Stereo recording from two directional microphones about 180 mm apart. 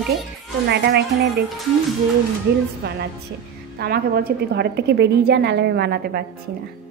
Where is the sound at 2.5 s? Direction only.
60° right (ahead or behind).